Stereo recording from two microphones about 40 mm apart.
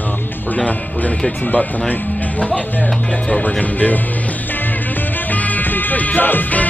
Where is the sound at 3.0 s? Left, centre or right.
Left.